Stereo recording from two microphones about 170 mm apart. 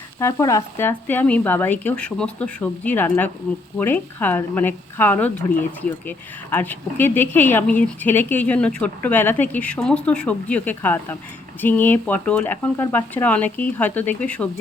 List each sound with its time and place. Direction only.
0.2 s speech: 15° left (ahead or behind)